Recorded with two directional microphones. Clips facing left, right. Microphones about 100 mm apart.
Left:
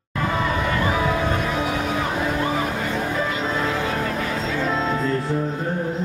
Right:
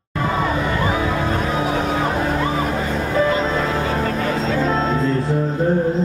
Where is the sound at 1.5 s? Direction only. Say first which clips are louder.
Right 3 dB; 35° right (ahead or behind).